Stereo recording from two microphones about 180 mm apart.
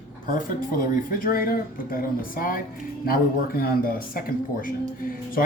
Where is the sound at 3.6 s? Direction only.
55° left (ahead or behind).